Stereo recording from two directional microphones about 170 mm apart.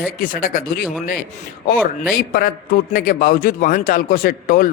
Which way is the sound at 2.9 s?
60° left (ahead or behind).